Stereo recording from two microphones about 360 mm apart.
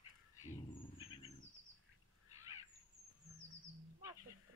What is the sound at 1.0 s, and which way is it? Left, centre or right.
Bird, centre.